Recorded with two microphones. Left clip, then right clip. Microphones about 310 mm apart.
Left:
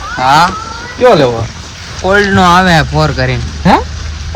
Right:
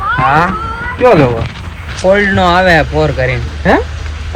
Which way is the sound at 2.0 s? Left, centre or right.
Centre.